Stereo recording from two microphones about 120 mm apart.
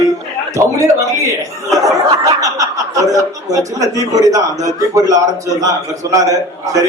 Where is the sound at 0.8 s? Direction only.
25° right (ahead or behind).